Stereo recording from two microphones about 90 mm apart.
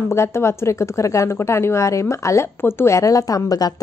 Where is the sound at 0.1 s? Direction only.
30° left (ahead or behind).